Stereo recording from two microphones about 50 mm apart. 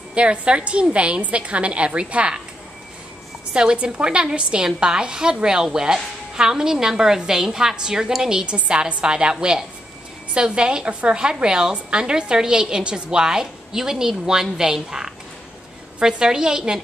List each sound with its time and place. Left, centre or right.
0.1 s a woman's voice: right
3.5 s a woman's voice: right